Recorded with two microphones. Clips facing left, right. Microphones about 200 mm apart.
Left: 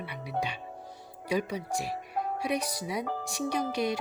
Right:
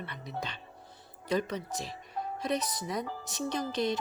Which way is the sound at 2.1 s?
65° left (ahead or behind).